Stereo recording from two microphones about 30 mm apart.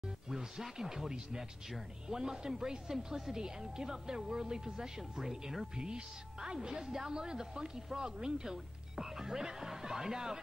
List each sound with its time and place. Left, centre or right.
0.0 s speech: centre
6.8 s speech: centre
7.1 s speech: right